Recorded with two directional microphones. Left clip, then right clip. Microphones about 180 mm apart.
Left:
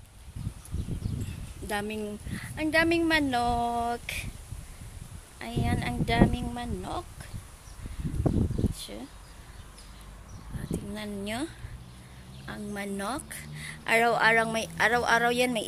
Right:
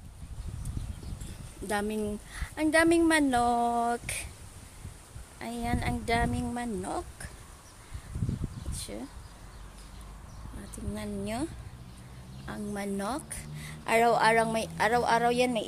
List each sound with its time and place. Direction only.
1.7 s a woman's voice: 15° right (ahead or behind)
5.4 s a woman's voice: 10° right (ahead or behind)
8.7 s a sound: 15° right (ahead or behind)
11.0 s speech: centre (ahead or behind)
12.4 s a woman's voice: 10° right (ahead or behind)